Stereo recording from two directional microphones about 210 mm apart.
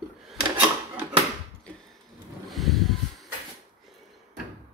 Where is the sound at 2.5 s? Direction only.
Centre (ahead or behind).